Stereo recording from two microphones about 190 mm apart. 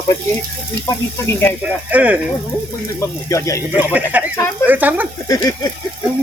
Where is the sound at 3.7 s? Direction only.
10° right (ahead or behind).